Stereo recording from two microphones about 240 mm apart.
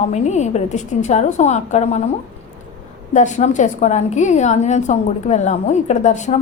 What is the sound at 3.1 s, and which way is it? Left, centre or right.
A woman's voice, left.